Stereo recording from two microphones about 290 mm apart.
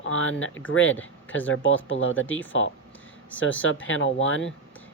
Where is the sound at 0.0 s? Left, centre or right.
Left.